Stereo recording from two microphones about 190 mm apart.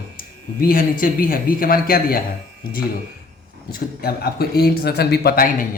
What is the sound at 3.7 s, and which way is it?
A man's voice, 55° left (ahead or behind).